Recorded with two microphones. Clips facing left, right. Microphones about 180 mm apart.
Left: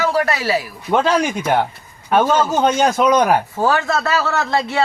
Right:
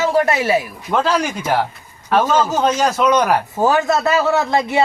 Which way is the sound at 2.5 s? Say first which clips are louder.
Left 1 dB; 30° left (ahead or behind).